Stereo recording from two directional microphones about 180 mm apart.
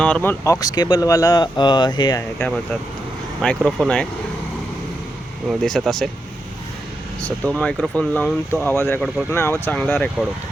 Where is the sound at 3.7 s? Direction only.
5° left (ahead or behind).